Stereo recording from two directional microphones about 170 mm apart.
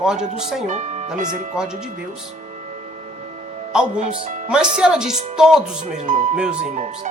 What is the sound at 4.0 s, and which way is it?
Speech, 45° right (ahead or behind).